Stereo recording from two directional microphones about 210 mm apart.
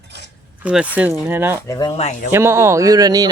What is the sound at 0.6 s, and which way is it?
Speech, 5° right (ahead or behind).